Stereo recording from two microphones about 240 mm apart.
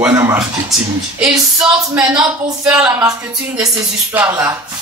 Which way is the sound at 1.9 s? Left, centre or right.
Centre.